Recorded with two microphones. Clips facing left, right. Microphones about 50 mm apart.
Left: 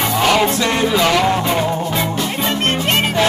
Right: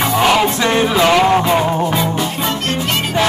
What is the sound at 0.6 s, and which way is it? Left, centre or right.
Music, right.